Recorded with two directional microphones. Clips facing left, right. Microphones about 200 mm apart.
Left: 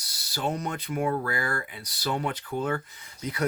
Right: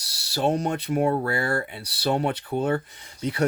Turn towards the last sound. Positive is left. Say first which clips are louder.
# right 6 dB
turn(degrees=-30)  # may be behind; listen again after turning